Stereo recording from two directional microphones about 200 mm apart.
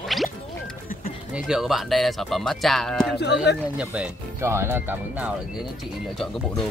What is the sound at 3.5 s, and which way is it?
Speech, 55° left (ahead or behind).